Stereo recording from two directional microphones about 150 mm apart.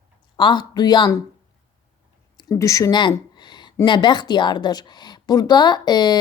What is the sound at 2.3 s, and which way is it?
Speech, 25° left (ahead or behind).